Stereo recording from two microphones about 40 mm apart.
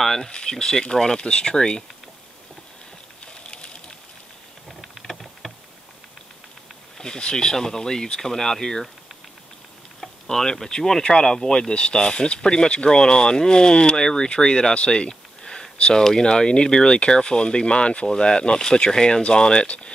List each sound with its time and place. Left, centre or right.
0.0 s speech: centre
3.4 s a sound: left
4.8 s rain: centre
7.0 s speech: centre
10.2 s speech: centre